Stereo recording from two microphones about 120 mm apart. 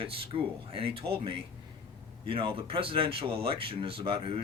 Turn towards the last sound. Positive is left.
turn(degrees=-50)  # may be behind; listen again after turning